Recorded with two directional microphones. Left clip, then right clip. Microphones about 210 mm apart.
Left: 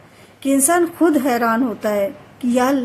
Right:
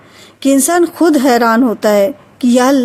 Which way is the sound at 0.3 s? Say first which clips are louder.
Right 5 dB; 40° right (ahead or behind).